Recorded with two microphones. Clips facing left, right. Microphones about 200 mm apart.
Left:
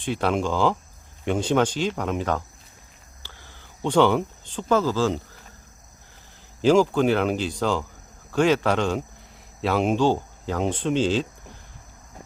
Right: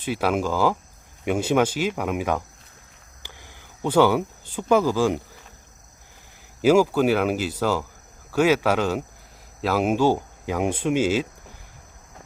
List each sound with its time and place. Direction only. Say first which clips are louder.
0.0 s speech: even; 5° right (ahead or behind)
3.2 s a sound: right 2 dB; 15° right (ahead or behind)
6.6 s speech: right 1 dB; 5° right (ahead or behind)